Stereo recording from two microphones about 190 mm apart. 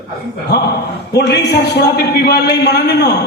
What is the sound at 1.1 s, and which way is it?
A man's voice, 60° left (ahead or behind).